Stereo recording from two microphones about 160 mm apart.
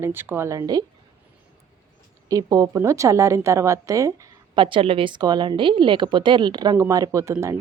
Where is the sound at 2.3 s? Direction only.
20° right (ahead or behind).